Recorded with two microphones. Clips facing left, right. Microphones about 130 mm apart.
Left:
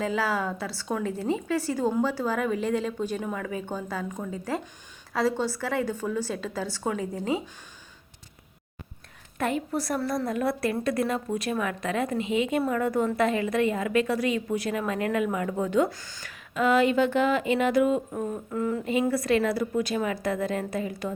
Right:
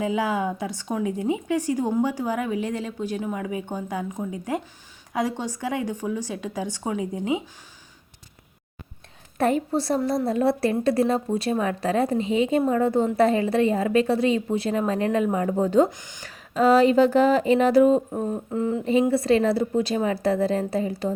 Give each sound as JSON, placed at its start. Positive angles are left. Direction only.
{"t": 0.0, "sound": "a woman's voice", "side_deg": -15}
{"t": 9.4, "sound": "a woman's voice", "side_deg": -35}
{"t": 15.9, "sound": "a woman's voice", "side_deg": -20}
{"t": 16.3, "sound": "a woman's voice", "side_deg": -35}